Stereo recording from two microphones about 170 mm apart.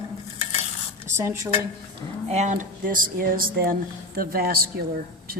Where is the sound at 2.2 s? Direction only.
45° right (ahead or behind).